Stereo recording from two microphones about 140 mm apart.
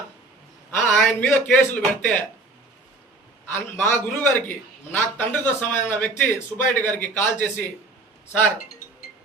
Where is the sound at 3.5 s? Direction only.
15° left (ahead or behind).